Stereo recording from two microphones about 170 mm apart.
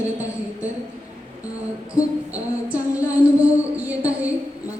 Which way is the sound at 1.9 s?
10° right (ahead or behind).